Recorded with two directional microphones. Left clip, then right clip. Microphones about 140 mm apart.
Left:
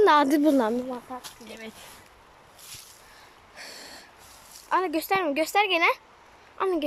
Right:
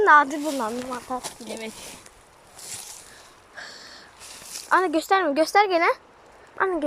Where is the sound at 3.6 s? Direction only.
20° left (ahead or behind).